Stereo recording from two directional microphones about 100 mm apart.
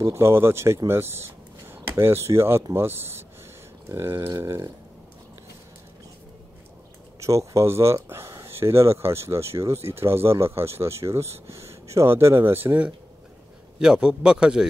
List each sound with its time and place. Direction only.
0.0 s speech: 25° right (ahead or behind)
7.2 s speech: 30° right (ahead or behind)
13.7 s a man's voice: 5° right (ahead or behind)